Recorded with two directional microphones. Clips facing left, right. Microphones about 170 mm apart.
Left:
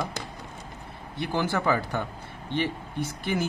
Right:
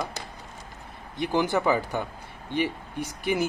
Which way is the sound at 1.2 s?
15° right (ahead or behind).